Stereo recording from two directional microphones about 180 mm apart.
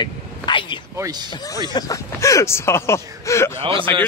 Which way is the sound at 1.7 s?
20° left (ahead or behind).